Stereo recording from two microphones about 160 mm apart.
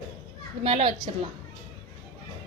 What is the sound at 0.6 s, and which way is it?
Speech, 35° right (ahead or behind).